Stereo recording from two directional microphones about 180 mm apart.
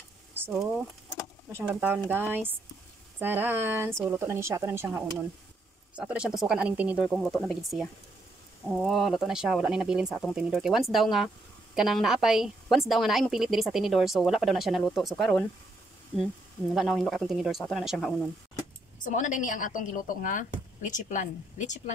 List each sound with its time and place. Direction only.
0.3 s a sound: 10° right (ahead or behind)
1.5 s speech: 10° right (ahead or behind)
16.7 s speech: centre (ahead or behind)
19.0 s a woman's voice: 45° left (ahead or behind)